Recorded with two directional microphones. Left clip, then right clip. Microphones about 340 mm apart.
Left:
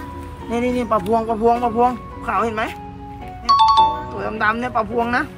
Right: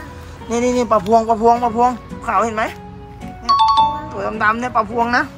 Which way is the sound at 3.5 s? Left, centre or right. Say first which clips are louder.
Even; centre.